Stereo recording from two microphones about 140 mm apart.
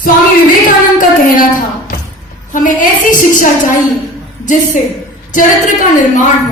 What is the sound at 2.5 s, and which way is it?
A woman's voice, 70° left (ahead or behind).